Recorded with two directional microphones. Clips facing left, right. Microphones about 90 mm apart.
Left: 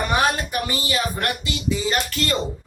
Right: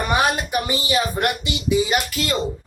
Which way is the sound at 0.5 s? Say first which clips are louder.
Right 3 dB; 20° right (ahead or behind).